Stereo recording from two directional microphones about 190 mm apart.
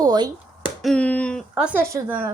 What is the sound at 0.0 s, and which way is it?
Speech, 20° right (ahead or behind).